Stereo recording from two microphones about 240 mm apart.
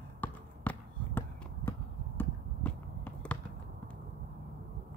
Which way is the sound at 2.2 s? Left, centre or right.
Centre.